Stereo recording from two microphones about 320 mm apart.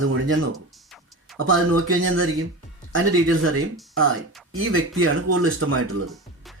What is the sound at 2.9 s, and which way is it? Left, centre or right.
Speech, right.